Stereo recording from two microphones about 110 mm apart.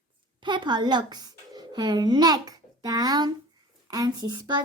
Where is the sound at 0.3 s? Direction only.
45° right (ahead or behind).